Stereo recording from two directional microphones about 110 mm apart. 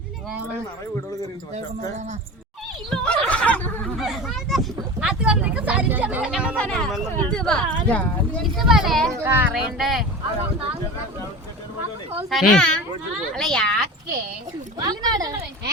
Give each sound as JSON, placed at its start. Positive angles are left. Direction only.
{"t": 2.9, "sound": "snicker", "side_deg": 5}
{"t": 3.9, "sound": "a sound", "side_deg": 0}
{"t": 6.6, "sound": "speech", "side_deg": 5}
{"t": 8.5, "sound": "speech", "side_deg": 0}
{"t": 9.1, "sound": "speech", "side_deg": -20}
{"t": 9.7, "sound": "speech", "side_deg": 0}
{"t": 12.3, "sound": "speech", "side_deg": 0}
{"t": 14.8, "sound": "speech", "side_deg": -40}